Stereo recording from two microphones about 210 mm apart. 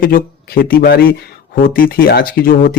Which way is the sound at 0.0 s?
45° left (ahead or behind).